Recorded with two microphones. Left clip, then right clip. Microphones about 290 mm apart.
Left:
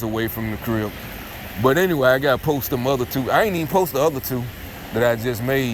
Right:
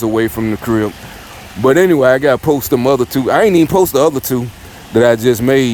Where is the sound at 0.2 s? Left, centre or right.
Right.